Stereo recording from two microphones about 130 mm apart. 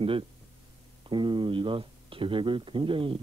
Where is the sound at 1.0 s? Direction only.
40° right (ahead or behind).